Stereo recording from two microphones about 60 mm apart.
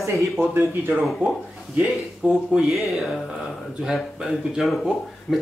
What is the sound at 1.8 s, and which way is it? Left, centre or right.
Speech, right.